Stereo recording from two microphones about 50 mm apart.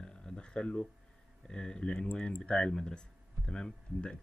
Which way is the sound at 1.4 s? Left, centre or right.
Centre.